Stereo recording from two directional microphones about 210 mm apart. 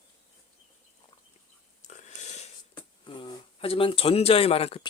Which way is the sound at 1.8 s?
35° left (ahead or behind).